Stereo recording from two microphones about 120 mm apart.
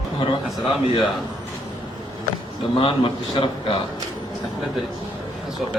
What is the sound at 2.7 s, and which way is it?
A man's voice, 50° left (ahead or behind).